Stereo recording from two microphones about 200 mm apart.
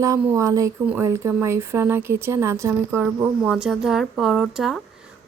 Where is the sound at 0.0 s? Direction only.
15° right (ahead or behind).